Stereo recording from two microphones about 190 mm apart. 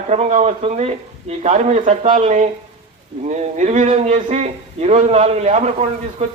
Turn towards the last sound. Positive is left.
turn(degrees=-30)  # may be behind; listen again after turning